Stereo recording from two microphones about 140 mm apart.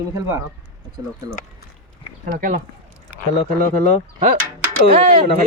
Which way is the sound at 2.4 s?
90° right.